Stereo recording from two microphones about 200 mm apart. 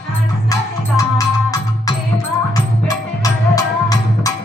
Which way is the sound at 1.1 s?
15° left (ahead or behind).